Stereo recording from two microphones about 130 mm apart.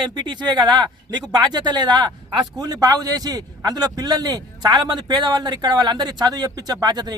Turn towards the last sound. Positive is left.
turn(degrees=-30)  # may be behind; listen again after turning